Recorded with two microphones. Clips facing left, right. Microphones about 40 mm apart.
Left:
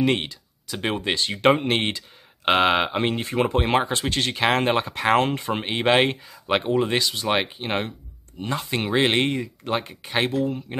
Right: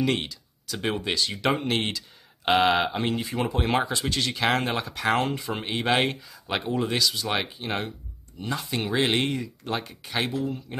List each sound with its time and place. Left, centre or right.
0.0 s speech: left
5.5 s speech: left